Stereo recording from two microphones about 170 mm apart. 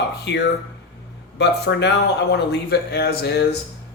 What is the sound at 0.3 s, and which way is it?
Speech, 90° left.